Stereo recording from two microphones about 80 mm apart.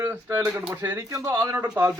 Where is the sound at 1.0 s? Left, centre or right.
Right.